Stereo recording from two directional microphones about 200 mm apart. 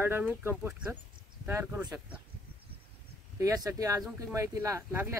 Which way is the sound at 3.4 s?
15° right (ahead or behind).